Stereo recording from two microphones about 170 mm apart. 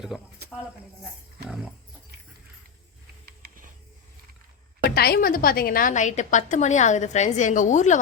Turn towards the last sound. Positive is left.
turn(degrees=45)  # may be behind; listen again after turning